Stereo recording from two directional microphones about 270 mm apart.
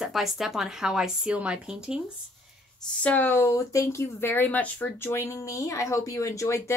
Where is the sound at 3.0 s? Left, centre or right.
Centre.